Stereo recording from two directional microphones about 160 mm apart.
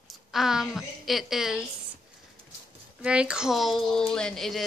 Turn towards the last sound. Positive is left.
turn(degrees=5)  # may be behind; listen again after turning